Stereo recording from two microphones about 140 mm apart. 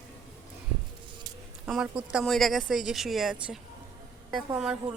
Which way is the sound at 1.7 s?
5° right (ahead or behind).